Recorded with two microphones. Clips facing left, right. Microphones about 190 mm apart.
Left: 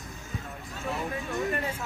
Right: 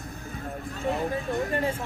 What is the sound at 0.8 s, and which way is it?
Speech, 35° right (ahead or behind).